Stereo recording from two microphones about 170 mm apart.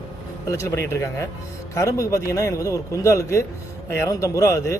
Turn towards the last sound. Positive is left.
turn(degrees=15)  # may be behind; listen again after turning